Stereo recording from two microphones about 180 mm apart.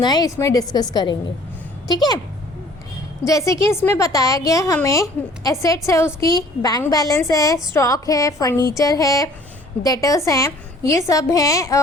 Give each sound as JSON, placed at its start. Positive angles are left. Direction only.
{"t": 0.0, "sound": "a woman's voice", "side_deg": 20}
{"t": 3.2, "sound": "a woman's voice", "side_deg": 15}